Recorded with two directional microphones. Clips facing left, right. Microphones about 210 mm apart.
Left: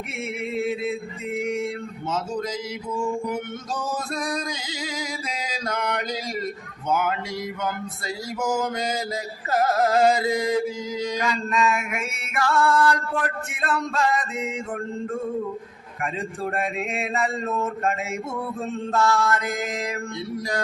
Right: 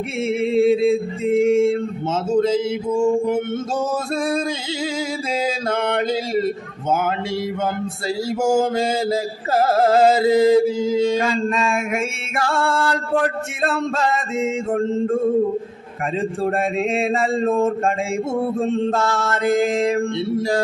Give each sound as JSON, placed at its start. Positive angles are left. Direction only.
{"t": 0.3, "sound": "music", "side_deg": -30}
{"t": 5.3, "sound": "speech", "side_deg": -30}
{"t": 8.3, "sound": "music", "side_deg": -25}